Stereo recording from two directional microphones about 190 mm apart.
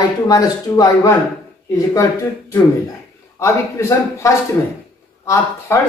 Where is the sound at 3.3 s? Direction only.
15° left (ahead or behind).